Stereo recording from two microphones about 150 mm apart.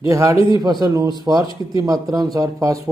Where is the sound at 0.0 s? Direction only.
20° right (ahead or behind).